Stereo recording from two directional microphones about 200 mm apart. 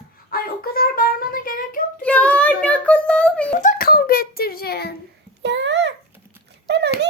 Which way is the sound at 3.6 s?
45° left (ahead or behind).